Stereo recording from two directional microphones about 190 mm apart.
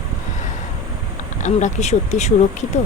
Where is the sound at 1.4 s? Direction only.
40° left (ahead or behind).